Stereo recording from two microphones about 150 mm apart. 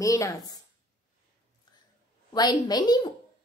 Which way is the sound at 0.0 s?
20° left (ahead or behind).